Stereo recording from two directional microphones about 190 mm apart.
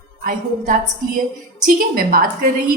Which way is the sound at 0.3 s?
45° right (ahead or behind).